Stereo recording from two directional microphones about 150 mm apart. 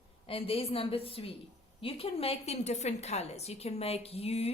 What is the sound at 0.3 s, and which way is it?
A woman's voice, 40° left (ahead or behind).